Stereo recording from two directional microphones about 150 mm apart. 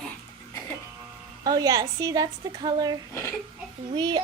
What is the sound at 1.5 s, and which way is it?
A woman's voice, 25° right (ahead or behind).